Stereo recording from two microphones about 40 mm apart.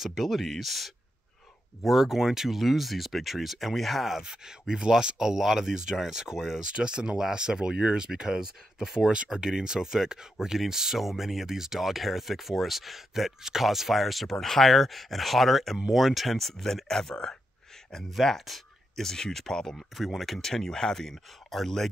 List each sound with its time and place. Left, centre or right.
0.0 s speech: centre
4.2 s speech: centre
18.1 s speech: centre
19.0 s speech: centre
20.0 s speech: centre